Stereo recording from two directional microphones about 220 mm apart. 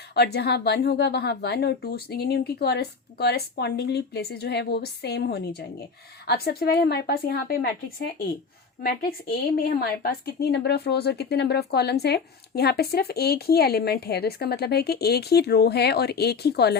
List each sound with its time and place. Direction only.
0.1 s a woman's voice: 50° left (ahead or behind)